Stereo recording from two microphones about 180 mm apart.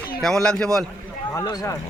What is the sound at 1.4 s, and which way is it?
Speech, 15° left (ahead or behind).